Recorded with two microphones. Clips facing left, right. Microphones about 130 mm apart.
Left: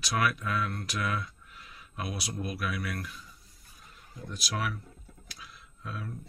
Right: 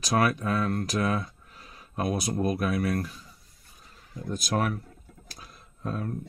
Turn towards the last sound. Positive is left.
turn(degrees=-45)  # may be behind; listen again after turning